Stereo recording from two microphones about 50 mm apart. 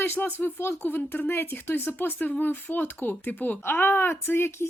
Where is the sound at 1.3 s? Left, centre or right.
Left.